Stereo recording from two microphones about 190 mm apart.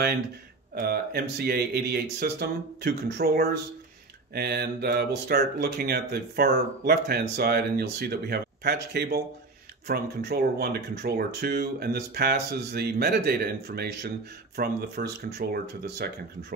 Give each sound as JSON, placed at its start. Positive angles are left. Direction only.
{"t": 0.7, "sound": "speech", "side_deg": -55}